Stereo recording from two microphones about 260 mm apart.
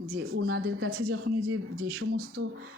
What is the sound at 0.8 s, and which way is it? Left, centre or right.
Speech, right.